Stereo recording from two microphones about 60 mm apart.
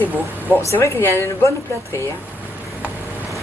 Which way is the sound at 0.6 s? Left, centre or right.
Left.